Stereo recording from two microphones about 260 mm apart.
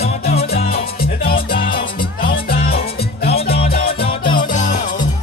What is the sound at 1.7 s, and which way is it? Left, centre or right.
Music, centre.